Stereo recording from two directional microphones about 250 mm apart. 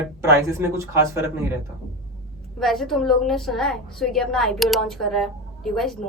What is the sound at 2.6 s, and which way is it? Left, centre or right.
A woman's voice, centre.